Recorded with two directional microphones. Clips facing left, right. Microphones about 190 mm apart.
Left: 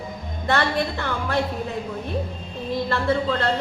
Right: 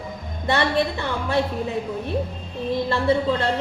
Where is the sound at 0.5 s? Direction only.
15° right (ahead or behind).